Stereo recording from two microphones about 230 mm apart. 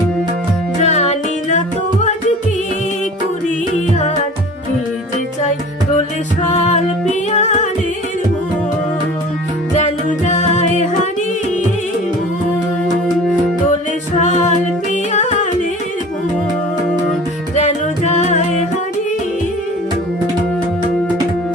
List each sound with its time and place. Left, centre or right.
0.8 s music: left
6.5 s music: left
9.7 s music: left
14.2 s music: left
17.5 s music: left